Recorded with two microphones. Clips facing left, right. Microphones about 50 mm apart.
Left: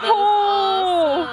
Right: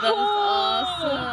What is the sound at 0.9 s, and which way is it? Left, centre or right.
Music, centre.